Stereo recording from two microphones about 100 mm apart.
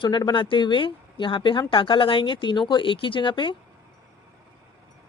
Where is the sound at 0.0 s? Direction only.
45° left (ahead or behind).